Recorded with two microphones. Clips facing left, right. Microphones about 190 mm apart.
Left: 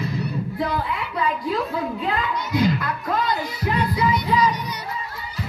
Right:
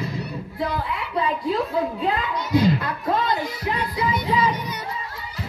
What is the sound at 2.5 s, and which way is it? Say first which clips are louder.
Music: right 2 dB; 30° right (ahead or behind).